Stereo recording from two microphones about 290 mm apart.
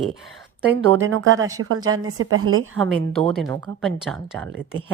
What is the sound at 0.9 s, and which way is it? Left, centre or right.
Speech, right.